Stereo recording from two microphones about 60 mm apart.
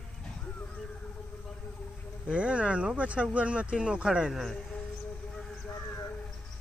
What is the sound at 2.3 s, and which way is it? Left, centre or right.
Speech, centre.